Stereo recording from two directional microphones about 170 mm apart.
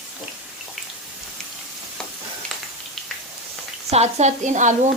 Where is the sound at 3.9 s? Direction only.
40° right (ahead or behind).